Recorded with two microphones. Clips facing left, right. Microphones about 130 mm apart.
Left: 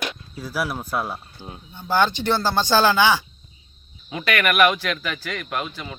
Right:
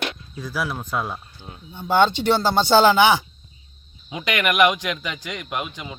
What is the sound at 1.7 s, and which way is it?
Speech, 15° right (ahead or behind).